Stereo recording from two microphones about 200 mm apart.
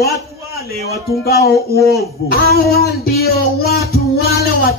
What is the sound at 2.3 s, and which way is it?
A man's voice, 50° left (ahead or behind).